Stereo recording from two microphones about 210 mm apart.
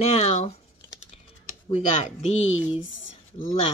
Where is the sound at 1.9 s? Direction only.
35° left (ahead or behind).